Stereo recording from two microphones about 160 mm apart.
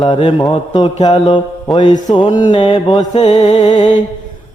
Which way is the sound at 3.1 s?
45° left (ahead or behind).